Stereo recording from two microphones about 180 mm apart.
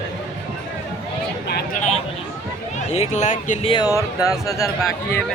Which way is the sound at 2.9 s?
40° left (ahead or behind).